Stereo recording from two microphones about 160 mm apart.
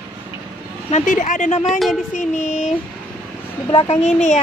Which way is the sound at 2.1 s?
50° left (ahead or behind).